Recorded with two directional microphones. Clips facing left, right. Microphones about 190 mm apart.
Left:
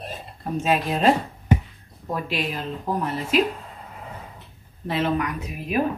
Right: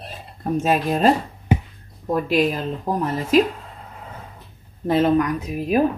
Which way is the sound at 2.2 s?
45° right (ahead or behind).